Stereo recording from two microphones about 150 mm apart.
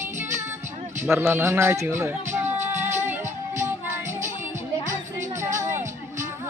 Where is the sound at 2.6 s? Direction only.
15° right (ahead or behind).